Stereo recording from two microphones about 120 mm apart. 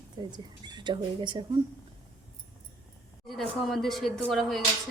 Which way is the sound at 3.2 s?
Centre (ahead or behind).